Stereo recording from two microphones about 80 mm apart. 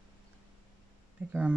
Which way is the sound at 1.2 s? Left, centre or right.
Right.